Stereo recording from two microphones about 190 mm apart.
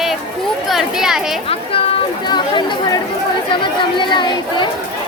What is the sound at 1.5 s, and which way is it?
Speech, 30° left (ahead or behind).